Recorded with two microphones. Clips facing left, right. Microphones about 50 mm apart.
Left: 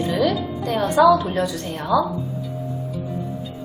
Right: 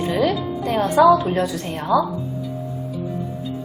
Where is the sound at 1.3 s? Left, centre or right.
Centre.